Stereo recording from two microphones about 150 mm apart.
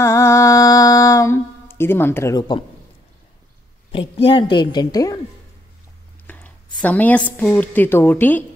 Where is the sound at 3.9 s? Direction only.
35° left (ahead or behind).